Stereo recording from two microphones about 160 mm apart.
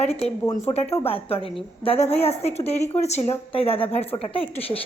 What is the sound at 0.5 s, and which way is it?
Speech, 40° left (ahead or behind).